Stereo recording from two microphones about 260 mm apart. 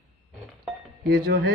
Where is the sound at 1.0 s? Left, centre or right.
Right.